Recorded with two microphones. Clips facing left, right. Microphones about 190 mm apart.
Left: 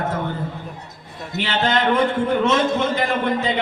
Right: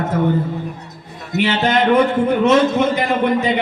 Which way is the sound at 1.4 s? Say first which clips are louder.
Right 4 dB; 20° right (ahead or behind).